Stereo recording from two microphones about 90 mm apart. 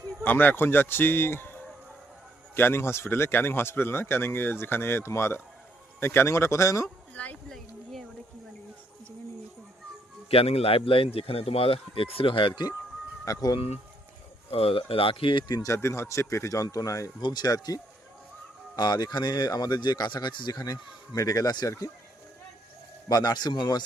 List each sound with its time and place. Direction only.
0.2 s speech: 20° left (ahead or behind)
2.6 s speech: 25° left (ahead or behind)
7.1 s speech: 15° left (ahead or behind)
10.2 s a man's voice: 90° left; by 12.6 s 70° left (ahead or behind)
13.2 s speech: 45° left (ahead or behind)
14.5 s speech: 90° left; by 15.6 s 60° left (ahead or behind)
15.6 s speech: 35° left (ahead or behind)
18.8 s speech: 50° left (ahead or behind)
23.0 s speech: 50° left (ahead or behind)